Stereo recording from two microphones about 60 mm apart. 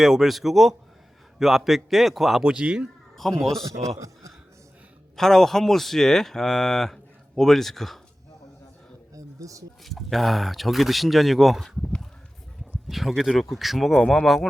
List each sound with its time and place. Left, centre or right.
0.0 s cattle: centre
2.4 s speech: centre
3.2 s speech: centre
3.7 s a man's voice: right
5.1 s cattle: centre
9.1 s a sound: right
9.8 s cattle: centre
12.9 s cattle: centre